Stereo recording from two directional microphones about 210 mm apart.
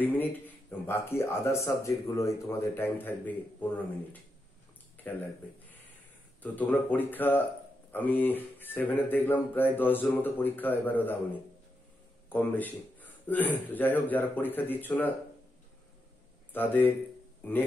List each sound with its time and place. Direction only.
0.0 s speech: 10° left (ahead or behind)
6.4 s speech: 10° left (ahead or behind)
12.3 s speech: 10° left (ahead or behind)
16.5 s speech: 10° left (ahead or behind)